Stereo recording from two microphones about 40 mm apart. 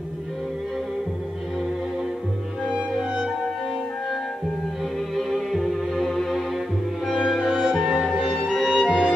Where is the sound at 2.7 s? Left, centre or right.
Right.